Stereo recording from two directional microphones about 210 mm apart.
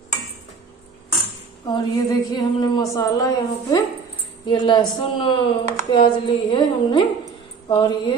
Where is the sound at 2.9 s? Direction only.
15° left (ahead or behind).